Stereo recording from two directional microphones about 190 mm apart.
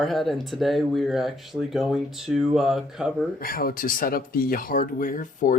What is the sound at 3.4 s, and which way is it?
Speech, 50° left (ahead or behind).